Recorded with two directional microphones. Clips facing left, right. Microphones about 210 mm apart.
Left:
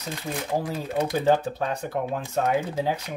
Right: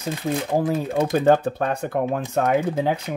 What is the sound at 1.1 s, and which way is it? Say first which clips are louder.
Speech: right 5 dB; 55° right (ahead or behind).